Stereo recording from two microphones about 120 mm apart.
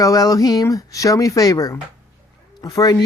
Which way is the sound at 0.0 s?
30° left (ahead or behind).